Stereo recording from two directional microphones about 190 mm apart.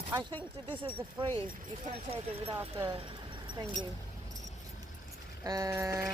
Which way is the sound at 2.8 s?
25° right (ahead or behind).